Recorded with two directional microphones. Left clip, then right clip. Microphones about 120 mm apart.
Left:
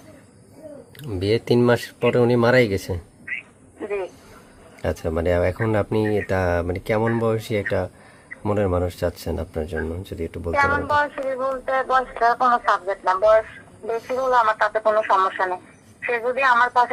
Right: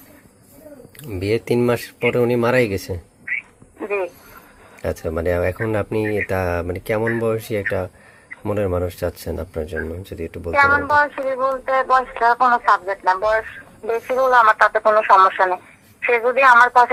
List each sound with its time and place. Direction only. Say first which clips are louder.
1.0 s speech: even; 10° left (ahead or behind)
3.8 s a sound: right 4 dB; 45° right (ahead or behind)
4.8 s speech: right 1 dB; 10° left (ahead or behind)
10.5 s speech: right 5 dB; 30° right (ahead or behind)
14.1 s speech: right 5 dB; 50° right (ahead or behind)